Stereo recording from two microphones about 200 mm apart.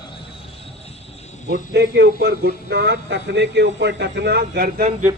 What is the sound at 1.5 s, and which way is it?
Speech, 55° right (ahead or behind).